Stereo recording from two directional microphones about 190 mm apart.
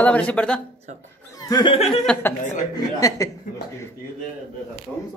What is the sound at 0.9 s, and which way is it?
Speech, 40° right (ahead or behind).